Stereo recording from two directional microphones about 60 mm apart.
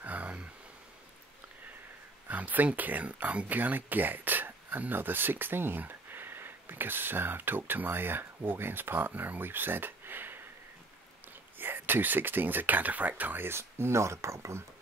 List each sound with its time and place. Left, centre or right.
0.0 s a sound: right
2.2 s speech: right
11.5 s speech: right